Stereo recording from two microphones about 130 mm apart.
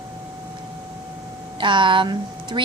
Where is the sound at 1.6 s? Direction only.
40° right (ahead or behind).